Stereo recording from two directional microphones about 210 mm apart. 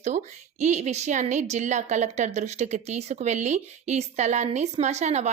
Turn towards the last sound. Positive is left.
turn(degrees=-30)  # may be behind; listen again after turning